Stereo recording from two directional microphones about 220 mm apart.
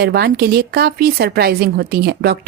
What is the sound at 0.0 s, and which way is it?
Speech, 45° right (ahead or behind).